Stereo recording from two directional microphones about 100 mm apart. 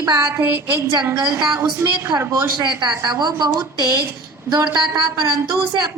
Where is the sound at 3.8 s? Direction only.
40° left (ahead or behind).